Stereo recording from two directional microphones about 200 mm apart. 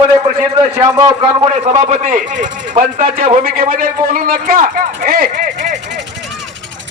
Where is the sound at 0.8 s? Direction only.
20° right (ahead or behind).